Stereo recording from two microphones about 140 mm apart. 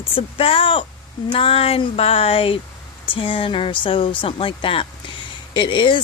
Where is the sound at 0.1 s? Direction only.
40° left (ahead or behind).